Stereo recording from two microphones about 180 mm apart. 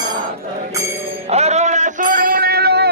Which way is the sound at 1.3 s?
35° right (ahead or behind).